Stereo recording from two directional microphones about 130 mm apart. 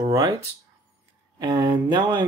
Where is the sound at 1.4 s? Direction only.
30° right (ahead or behind).